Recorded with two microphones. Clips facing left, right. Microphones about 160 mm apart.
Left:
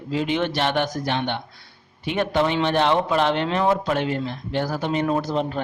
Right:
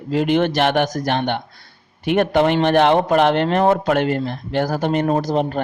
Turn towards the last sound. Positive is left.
turn(degrees=-55)  # may be behind; listen again after turning